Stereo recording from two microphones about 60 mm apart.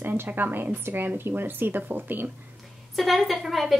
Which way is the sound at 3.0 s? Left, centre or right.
Centre.